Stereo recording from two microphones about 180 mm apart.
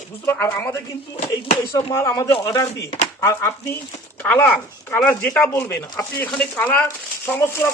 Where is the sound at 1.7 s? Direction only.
15° left (ahead or behind).